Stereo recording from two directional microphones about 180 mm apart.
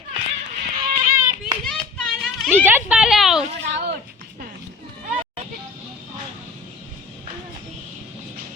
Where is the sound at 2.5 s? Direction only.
10° right (ahead or behind).